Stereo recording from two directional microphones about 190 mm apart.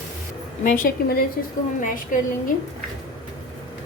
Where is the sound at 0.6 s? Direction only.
45° left (ahead or behind).